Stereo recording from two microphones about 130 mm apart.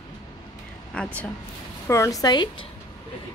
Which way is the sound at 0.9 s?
10° left (ahead or behind).